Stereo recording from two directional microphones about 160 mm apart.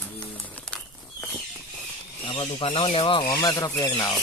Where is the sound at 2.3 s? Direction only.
35° left (ahead or behind).